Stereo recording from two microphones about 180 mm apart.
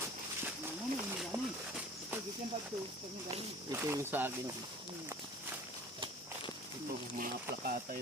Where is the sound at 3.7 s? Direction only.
10° right (ahead or behind).